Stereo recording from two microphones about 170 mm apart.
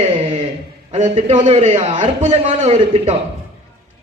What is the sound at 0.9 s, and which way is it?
A man's voice, 40° right (ahead or behind).